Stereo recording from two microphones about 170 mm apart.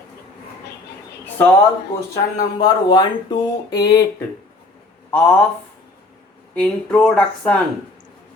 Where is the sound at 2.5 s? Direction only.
25° left (ahead or behind).